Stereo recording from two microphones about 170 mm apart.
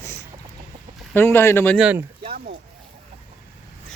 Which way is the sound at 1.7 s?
10° right (ahead or behind).